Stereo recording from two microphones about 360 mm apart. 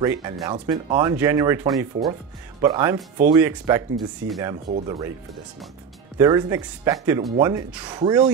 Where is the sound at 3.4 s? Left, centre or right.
Centre.